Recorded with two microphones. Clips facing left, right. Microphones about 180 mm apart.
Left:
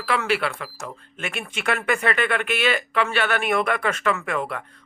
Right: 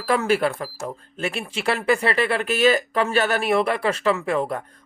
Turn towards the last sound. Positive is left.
turn(degrees=-35)  # may be behind; listen again after turning